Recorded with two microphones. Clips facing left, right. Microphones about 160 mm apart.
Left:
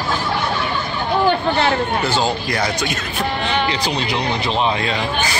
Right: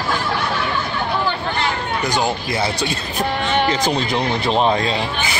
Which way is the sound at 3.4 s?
45° right (ahead or behind).